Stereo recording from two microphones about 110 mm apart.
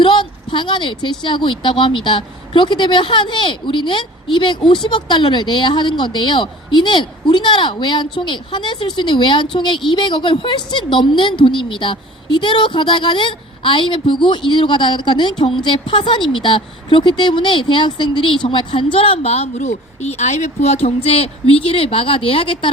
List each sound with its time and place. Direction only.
0.0 s a woman's voice: 45° left (ahead or behind)